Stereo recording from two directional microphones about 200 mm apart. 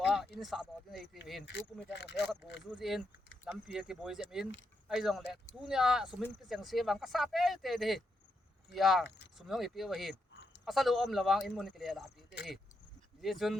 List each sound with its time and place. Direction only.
0.3 s speech: centre (ahead or behind)
1.9 s speech: 60° left (ahead or behind)
2.7 s speech: centre (ahead or behind)
13.2 s speech: centre (ahead or behind)